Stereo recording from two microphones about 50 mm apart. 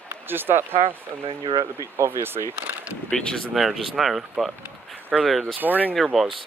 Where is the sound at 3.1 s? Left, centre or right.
Centre.